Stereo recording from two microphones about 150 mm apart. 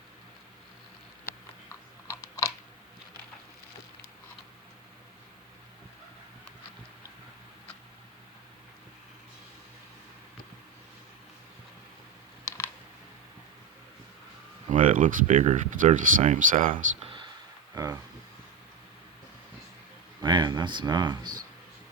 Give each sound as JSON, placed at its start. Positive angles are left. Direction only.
{"t": 1.7, "sound": "typing", "side_deg": 20}
{"t": 12.5, "sound": "computer keyboard", "side_deg": 15}
{"t": 14.7, "sound": "speech", "side_deg": -60}
{"t": 17.0, "sound": "a sound", "side_deg": -35}
{"t": 17.7, "sound": "a sound", "side_deg": -25}
{"t": 20.2, "sound": "speech", "side_deg": -30}